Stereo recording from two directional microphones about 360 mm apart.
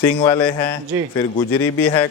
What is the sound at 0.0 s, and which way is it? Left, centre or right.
Speech, centre.